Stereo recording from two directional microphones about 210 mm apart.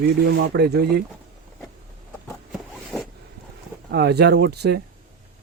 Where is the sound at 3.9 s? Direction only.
50° right (ahead or behind).